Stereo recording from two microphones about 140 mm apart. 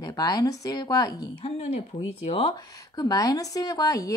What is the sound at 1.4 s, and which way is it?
Speech, 45° left (ahead or behind).